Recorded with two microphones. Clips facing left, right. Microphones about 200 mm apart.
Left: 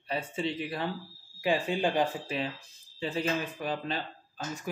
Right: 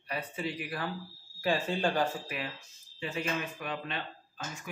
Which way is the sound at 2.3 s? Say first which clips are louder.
Left 5 dB; 30° left (ahead or behind).